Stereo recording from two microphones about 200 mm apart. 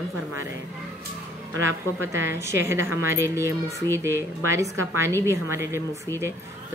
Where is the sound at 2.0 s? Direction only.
10° right (ahead or behind).